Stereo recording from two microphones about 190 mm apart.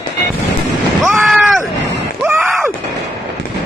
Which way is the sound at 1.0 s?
Centre (ahead or behind).